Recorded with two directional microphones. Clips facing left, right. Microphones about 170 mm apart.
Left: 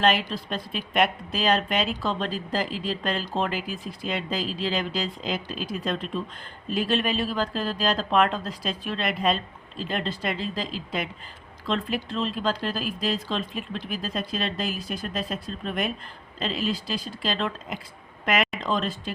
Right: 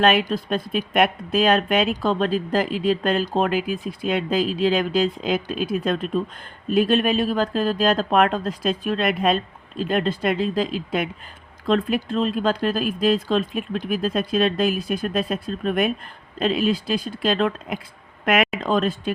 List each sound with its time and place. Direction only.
0.0 s speech: 55° right (ahead or behind)